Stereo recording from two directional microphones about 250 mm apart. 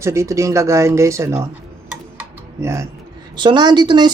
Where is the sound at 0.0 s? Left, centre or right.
Centre.